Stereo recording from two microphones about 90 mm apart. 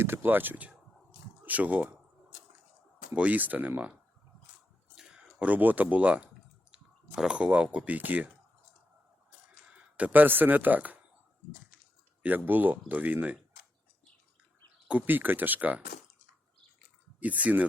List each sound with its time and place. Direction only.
0.0 s speech: 25° right (ahead or behind)
3.1 s speech: 15° right (ahead or behind)
4.9 s speech: 5° right (ahead or behind)
9.7 s speech: 15° right (ahead or behind)
12.5 s speech: 20° right (ahead or behind)
14.8 s speech: 20° right (ahead or behind)
17.2 s speech: 15° right (ahead or behind)